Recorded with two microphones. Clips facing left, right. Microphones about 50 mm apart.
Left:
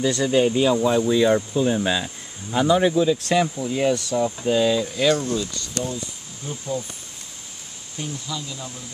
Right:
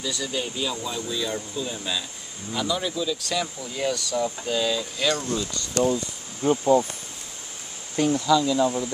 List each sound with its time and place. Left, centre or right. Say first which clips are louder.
0.0 s speech: left 10 dB; left
3.5 s speech: left 6 dB; left
5.1 s speech: left 4 dB; centre
6.4 s speech: right 10 dB; right
8.3 s speech: right 13 dB; right